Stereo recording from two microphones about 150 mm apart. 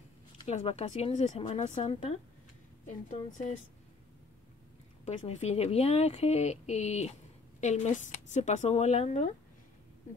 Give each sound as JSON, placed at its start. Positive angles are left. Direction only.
{"t": 0.5, "sound": "a woman's voice", "side_deg": 45}
{"t": 1.8, "sound": "speech", "side_deg": 35}
{"t": 3.1, "sound": "a woman's voice", "side_deg": 55}
{"t": 5.0, "sound": "a woman's voice", "side_deg": 50}